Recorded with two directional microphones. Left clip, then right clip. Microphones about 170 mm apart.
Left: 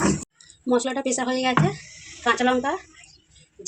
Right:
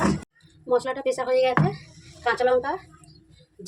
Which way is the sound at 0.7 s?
30° left (ahead or behind).